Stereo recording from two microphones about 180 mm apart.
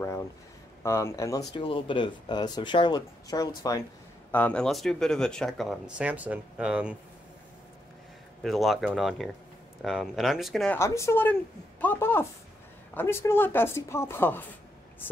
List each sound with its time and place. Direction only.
0.8 s speech: 15° left (ahead or behind)
1.5 s speech: 30° left (ahead or behind)
4.3 s speech: 10° left (ahead or behind)
8.4 s speech: centre (ahead or behind)
10.8 s speech: 15° left (ahead or behind)